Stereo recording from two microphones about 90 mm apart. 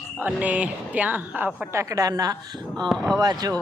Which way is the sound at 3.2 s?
45° right (ahead or behind).